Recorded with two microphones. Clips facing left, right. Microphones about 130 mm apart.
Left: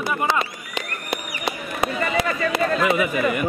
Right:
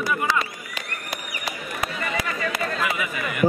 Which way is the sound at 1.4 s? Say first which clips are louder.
Left 5 dB; 25° left (ahead or behind).